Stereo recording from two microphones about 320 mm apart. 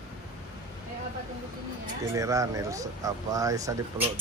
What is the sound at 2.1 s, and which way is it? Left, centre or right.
Speech, centre.